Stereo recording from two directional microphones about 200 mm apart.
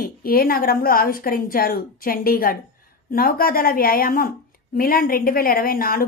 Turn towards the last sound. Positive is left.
turn(degrees=45)  # may be behind; listen again after turning